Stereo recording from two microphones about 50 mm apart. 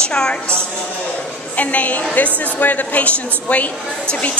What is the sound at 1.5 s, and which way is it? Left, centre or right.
A woman's voice, left.